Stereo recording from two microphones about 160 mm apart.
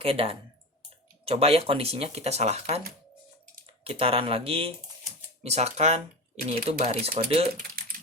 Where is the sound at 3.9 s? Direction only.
35° right (ahead or behind).